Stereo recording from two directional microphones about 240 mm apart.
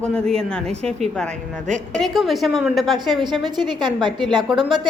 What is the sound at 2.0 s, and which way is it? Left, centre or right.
A woman's voice, centre.